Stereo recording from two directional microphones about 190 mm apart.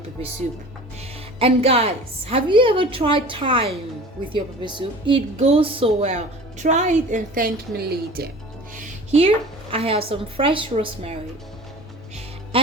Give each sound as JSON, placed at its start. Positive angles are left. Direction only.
{"t": 1.4, "sound": "a woman's voice", "side_deg": -30}
{"t": 9.1, "sound": "a woman's voice", "side_deg": -30}